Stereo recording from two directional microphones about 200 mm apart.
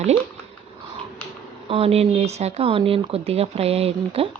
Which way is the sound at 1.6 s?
30° right (ahead or behind).